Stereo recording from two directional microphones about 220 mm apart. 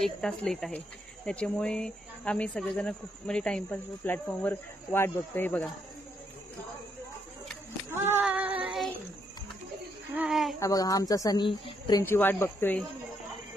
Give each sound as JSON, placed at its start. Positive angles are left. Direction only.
{"t": 0.0, "sound": "speech", "side_deg": 0}
{"t": 7.9, "sound": "child singing", "side_deg": -10}
{"t": 10.1, "sound": "speech", "side_deg": -5}
{"t": 10.6, "sound": "a woman's voice", "side_deg": 15}
{"t": 12.0, "sound": "a woman's voice", "side_deg": 10}